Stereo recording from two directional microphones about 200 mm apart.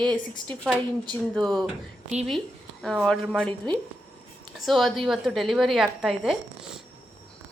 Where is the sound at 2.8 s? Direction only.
5° left (ahead or behind).